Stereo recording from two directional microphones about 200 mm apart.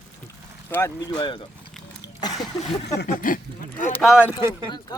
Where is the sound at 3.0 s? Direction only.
45° left (ahead or behind).